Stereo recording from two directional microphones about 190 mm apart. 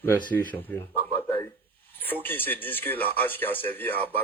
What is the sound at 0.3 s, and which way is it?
Speech, 10° left (ahead or behind).